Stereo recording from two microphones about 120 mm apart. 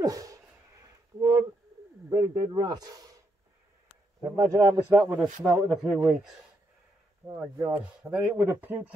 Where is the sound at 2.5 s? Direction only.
30° right (ahead or behind).